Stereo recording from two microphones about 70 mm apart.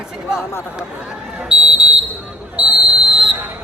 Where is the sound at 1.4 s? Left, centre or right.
Centre.